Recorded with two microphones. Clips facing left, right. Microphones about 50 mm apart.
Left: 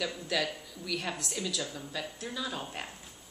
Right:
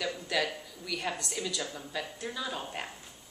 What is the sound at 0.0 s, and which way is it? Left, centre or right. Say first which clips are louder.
A woman's voice: right 1 dB; centre.